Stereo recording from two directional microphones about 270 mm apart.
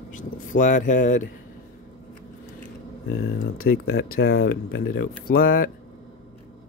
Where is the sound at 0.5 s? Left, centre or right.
Left.